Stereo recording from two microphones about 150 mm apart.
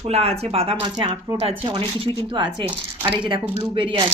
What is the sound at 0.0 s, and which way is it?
Speech, 45° right (ahead or behind).